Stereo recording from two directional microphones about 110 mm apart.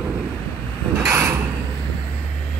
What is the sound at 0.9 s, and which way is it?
Mechanisms, 25° right (ahead or behind).